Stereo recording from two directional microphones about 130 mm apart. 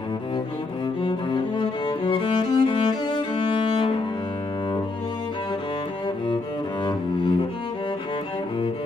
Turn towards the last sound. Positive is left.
turn(degrees=40)  # may be behind; listen again after turning